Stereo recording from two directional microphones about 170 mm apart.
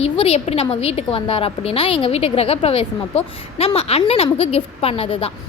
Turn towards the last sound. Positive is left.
turn(degrees=35)  # may be behind; listen again after turning